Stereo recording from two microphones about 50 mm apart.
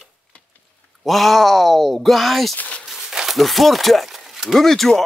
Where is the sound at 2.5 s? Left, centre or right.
Left.